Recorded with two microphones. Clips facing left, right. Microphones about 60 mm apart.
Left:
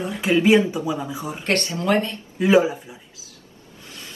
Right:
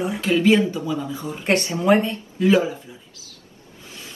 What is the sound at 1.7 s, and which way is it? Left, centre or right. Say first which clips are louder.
Speech: right 5 dB; centre.